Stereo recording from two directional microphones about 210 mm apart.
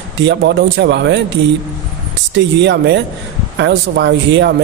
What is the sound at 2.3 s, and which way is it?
A man's voice, 55° right (ahead or behind).